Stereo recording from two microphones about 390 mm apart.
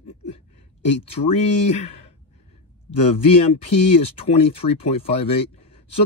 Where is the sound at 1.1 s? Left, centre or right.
Centre.